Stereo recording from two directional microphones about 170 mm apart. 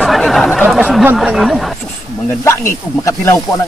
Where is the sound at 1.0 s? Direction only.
Centre (ahead or behind).